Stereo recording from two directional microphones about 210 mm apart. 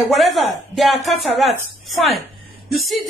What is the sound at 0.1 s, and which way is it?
A woman's voice, centre (ahead or behind).